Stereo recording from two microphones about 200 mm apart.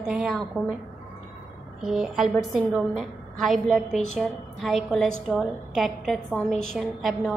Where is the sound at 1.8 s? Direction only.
Centre (ahead or behind).